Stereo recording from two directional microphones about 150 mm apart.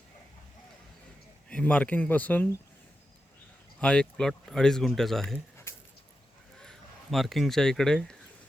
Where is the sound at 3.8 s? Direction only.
5° left (ahead or behind).